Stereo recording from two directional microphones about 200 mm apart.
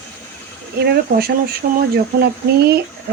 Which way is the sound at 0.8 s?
50° right (ahead or behind).